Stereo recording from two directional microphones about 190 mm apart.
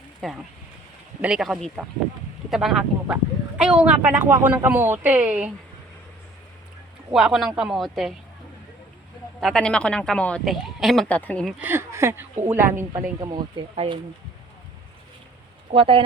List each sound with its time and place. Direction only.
0.2 s speech: centre (ahead or behind)
7.1 s speech: centre (ahead or behind)
9.4 s speech: 5° left (ahead or behind)
11.6 s speech: 10° right (ahead or behind)
13.1 s speech: 20° right (ahead or behind)
15.7 s speech: 30° right (ahead or behind)